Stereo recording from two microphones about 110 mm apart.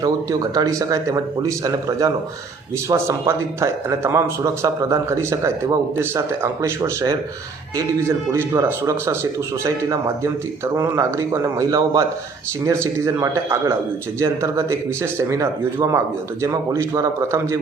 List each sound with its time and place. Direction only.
0.0 s a man's voice: 35° right (ahead or behind)